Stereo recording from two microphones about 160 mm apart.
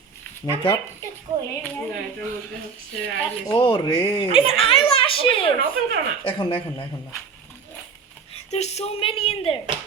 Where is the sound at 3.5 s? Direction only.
35° left (ahead or behind).